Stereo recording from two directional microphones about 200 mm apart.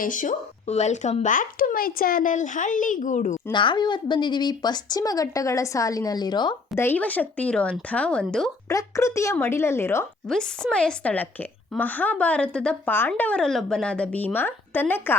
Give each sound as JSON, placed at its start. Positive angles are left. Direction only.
{"t": 0.0, "sound": "speech", "side_deg": 40}
{"t": 3.3, "sound": "speech", "side_deg": 25}
{"t": 6.8, "sound": "a woman's voice", "side_deg": 10}
{"t": 8.7, "sound": "a woman's voice", "side_deg": 15}